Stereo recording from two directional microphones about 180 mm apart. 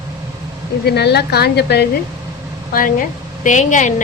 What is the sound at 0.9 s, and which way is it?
A woman's voice, 65° left (ahead or behind).